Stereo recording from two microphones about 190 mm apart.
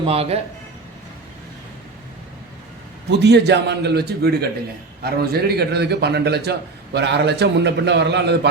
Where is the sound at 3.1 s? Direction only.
60° right (ahead or behind).